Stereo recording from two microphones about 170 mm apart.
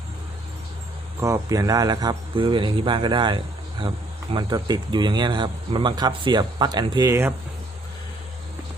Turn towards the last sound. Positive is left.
turn(degrees=-15)  # may be behind; listen again after turning